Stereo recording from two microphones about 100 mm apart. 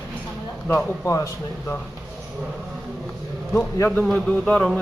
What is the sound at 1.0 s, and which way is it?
Speech, 35° left (ahead or behind).